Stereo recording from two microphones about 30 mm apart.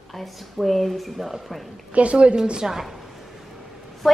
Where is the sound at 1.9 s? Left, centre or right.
Right.